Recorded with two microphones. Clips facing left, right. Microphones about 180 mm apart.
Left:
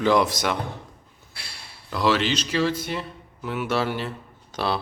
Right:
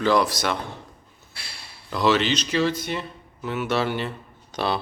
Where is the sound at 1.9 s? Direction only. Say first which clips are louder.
Right 1 dB; 5° left (ahead or behind).